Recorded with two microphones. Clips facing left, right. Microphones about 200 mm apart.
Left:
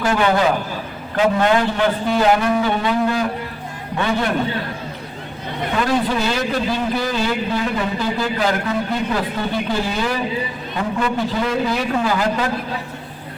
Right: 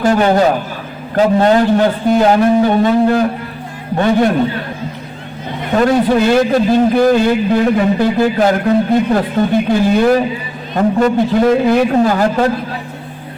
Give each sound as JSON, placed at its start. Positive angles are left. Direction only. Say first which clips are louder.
{"t": 0.0, "sound": "a man's voice", "louder": "right 6 dB", "side_deg": -40}
{"t": 5.7, "sound": "a man's voice", "louder": "right 8 dB", "side_deg": -50}